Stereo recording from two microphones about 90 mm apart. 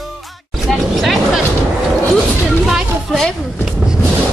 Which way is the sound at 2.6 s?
Centre (ahead or behind).